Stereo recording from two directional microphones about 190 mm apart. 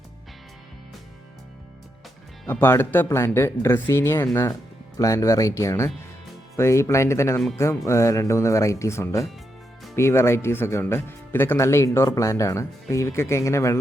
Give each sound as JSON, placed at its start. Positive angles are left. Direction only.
{"t": 2.5, "sound": "speech", "side_deg": 10}